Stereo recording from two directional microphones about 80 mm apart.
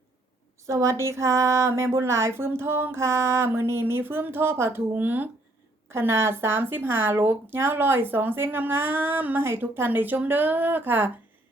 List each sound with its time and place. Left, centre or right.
0.7 s speech: right